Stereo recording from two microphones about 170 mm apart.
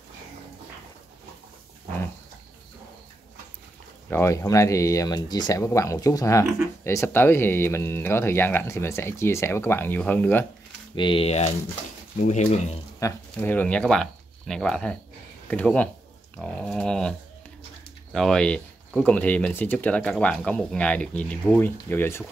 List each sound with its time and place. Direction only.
4.1 s speech: 15° left (ahead or behind)
11.0 s speech: 30° left (ahead or behind)
13.0 s speech: 10° left (ahead or behind)
16.3 s a sound: 5° left (ahead or behind)
18.1 s speech: 5° left (ahead or behind)